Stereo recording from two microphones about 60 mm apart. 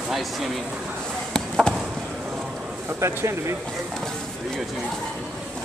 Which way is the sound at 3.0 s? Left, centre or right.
Right.